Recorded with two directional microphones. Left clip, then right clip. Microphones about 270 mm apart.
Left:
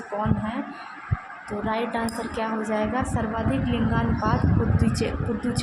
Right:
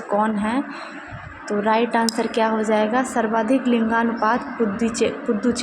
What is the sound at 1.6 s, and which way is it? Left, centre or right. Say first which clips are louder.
A woman's voice: right 8 dB; centre.